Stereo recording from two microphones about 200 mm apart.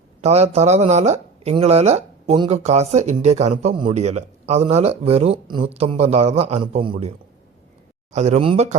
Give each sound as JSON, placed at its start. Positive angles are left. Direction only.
{"t": 0.2, "sound": "speech", "side_deg": -35}
{"t": 8.1, "sound": "speech", "side_deg": -35}